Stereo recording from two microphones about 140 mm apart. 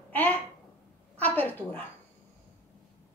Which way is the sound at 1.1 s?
10° left (ahead or behind).